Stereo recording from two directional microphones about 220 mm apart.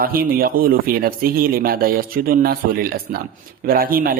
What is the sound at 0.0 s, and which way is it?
Speech, 40° right (ahead or behind).